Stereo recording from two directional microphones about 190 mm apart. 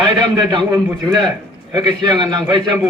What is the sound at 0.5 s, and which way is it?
A man's voice, 25° right (ahead or behind).